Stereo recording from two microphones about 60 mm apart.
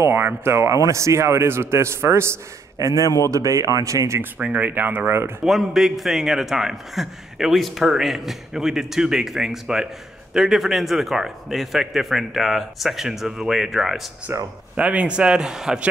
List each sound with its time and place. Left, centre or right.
0.0 s a man's voice: right
2.8 s a man's voice: right
4.6 s speech: right
5.4 s a man's voice: centre
14.3 s speech: right
14.8 s speech: right